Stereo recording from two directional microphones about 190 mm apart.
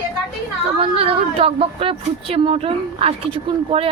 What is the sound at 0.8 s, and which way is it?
A woman's voice, 30° right (ahead or behind).